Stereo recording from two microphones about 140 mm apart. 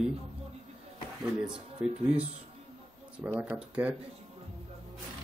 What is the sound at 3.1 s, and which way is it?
Speech, 10° right (ahead or behind).